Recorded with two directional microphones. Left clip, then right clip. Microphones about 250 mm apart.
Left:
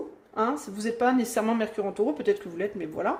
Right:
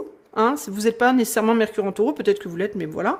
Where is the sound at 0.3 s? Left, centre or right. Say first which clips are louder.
Right 7 dB; right.